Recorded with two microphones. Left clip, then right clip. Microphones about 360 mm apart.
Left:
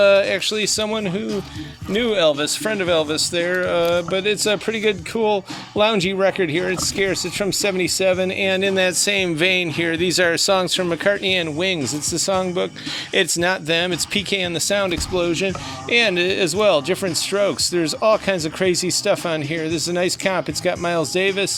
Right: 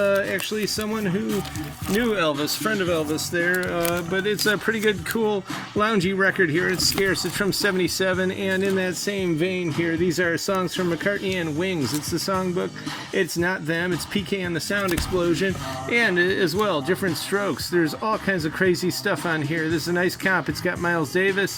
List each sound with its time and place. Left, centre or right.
0.0 s speech: centre
2.4 s speech: left
3.8 s speech: centre
5.8 s speech: centre